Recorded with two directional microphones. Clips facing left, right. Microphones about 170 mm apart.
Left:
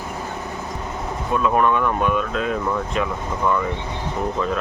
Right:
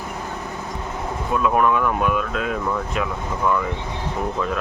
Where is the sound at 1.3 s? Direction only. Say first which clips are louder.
Even; 5° right (ahead or behind).